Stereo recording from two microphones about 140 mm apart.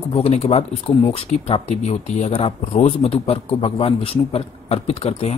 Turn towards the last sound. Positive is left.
turn(degrees=50)  # may be behind; listen again after turning